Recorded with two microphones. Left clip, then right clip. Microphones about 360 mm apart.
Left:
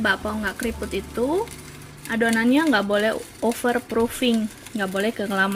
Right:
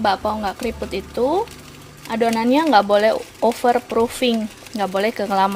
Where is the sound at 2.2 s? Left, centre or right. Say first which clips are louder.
Right 3 dB; centre.